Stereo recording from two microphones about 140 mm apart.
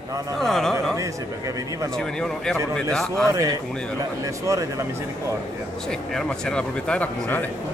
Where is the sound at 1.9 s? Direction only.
5° left (ahead or behind).